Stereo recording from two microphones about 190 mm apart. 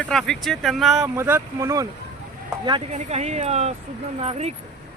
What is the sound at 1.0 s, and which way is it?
Speech, 10° right (ahead or behind).